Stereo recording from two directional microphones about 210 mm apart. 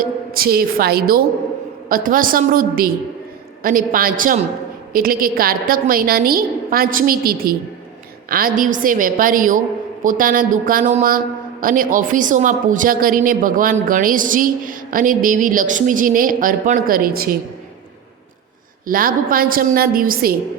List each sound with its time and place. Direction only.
0.0 s a woman's voice: 45° right (ahead or behind)
18.9 s a woman's voice: 40° right (ahead or behind)